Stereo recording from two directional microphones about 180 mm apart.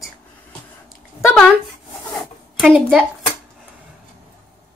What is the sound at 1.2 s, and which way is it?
Speech, centre (ahead or behind).